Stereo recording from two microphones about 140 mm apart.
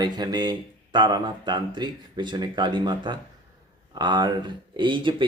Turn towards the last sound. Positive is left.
turn(degrees=-35)  # may be behind; listen again after turning